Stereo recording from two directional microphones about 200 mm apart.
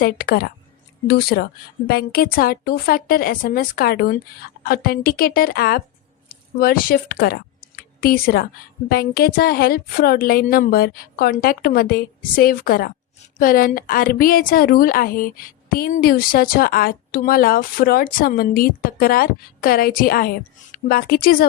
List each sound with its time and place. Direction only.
0.0 s a woman's voice: 45° left (ahead or behind)